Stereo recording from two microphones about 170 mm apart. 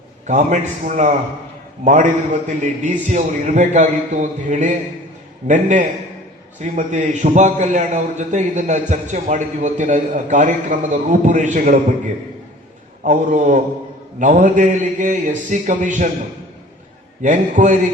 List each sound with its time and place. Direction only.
0.3 s a man's voice: 45° right (ahead or behind)
13.0 s a man's voice: 50° right (ahead or behind)
17.2 s a man's voice: 45° right (ahead or behind)